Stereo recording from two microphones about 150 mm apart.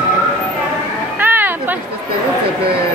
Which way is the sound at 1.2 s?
15° right (ahead or behind).